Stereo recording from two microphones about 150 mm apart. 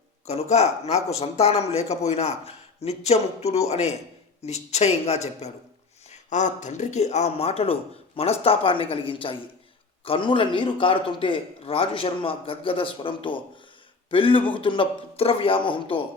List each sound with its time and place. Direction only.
0.3 s a man's voice: 45° left (ahead or behind)